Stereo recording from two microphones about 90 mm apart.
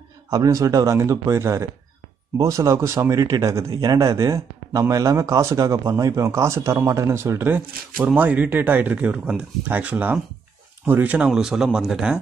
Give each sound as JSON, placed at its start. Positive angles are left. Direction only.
{"t": 0.3, "sound": "a man's voice", "side_deg": -40}